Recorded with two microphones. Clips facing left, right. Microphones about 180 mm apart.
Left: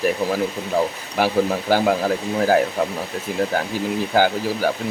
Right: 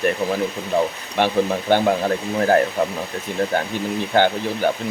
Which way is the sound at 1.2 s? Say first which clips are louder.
Even; 5° left (ahead or behind).